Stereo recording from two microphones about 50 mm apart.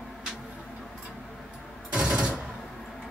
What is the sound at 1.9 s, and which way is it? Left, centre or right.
Machine gun, right.